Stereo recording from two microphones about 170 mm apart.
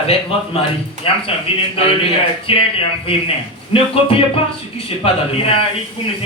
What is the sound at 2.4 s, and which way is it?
A man's voice, 30° left (ahead or behind).